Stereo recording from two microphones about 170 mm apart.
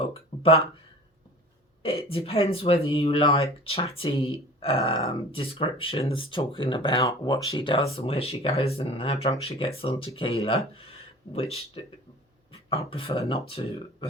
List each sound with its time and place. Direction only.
0.0 s a sound: 35° left (ahead or behind)
1.8 s speech: 35° left (ahead or behind)
12.9 s speech: 30° left (ahead or behind)